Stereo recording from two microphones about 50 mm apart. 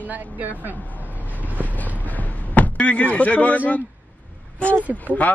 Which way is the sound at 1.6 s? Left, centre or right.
Left.